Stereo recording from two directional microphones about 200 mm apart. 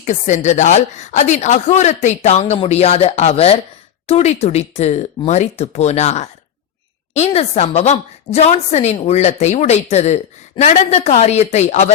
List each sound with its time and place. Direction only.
0.0 s a woman's voice: 35° left (ahead or behind)